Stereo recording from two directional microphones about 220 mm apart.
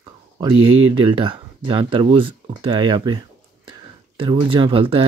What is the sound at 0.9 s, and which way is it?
Speech, 20° right (ahead or behind).